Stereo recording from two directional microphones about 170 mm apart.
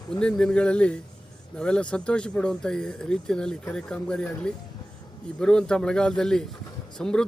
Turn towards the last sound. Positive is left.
turn(degrees=5)  # may be behind; listen again after turning